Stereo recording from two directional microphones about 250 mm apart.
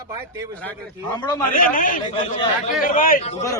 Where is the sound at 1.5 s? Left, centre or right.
Left.